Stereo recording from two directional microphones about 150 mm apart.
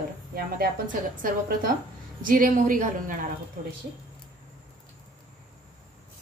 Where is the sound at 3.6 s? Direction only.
85° right.